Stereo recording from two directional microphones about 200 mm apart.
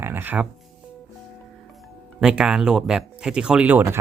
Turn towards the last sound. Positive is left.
turn(degrees=-10)  # may be behind; listen again after turning